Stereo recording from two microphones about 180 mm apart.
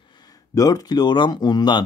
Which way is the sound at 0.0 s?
25° left (ahead or behind).